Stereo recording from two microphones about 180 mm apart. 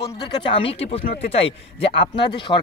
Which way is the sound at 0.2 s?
30° left (ahead or behind).